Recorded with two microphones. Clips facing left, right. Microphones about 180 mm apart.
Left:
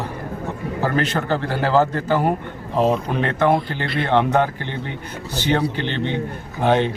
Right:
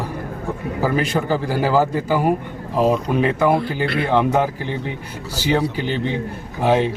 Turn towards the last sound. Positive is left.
turn(degrees=-5)  # may be behind; listen again after turning